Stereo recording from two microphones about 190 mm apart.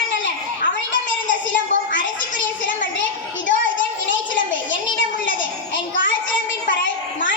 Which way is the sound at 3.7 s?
80° left.